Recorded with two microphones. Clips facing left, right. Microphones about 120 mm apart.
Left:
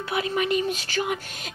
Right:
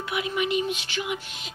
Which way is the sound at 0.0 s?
35° left (ahead or behind).